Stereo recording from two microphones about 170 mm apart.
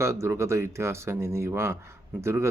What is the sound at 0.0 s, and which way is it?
Speech, 15° right (ahead or behind).